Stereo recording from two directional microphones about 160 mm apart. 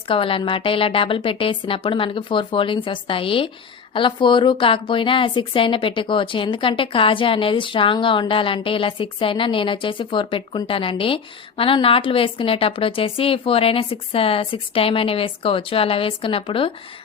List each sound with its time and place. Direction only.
0.1 s a woman's voice: 35° left (ahead or behind)